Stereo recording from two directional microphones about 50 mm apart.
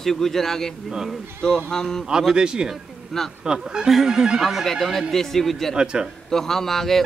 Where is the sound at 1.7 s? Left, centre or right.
Centre.